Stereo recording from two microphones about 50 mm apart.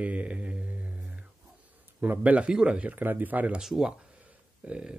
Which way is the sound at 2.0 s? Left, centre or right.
Right.